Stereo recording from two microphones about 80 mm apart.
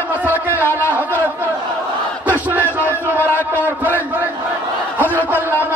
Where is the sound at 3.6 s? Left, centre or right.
Right.